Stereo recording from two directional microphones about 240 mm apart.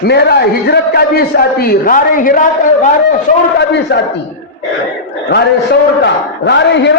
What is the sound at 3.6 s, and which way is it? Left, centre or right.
Speech, left.